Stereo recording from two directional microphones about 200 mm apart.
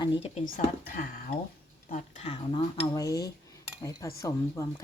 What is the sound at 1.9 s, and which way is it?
Speech, 35° left (ahead or behind).